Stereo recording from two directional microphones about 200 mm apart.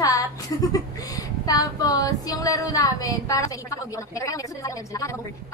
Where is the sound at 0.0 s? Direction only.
15° left (ahead or behind).